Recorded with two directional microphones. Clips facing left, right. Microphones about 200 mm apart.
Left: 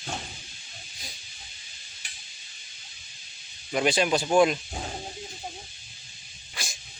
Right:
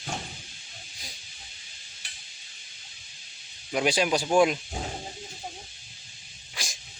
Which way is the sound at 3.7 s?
5° right (ahead or behind).